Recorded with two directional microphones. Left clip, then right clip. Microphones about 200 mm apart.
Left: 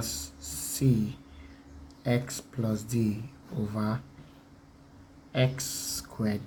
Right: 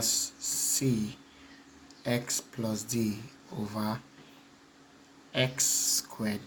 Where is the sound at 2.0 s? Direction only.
10° right (ahead or behind).